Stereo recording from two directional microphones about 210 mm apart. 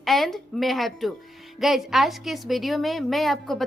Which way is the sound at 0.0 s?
Centre (ahead or behind).